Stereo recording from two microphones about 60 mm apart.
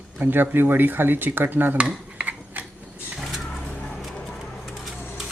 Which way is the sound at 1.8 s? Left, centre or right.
Right.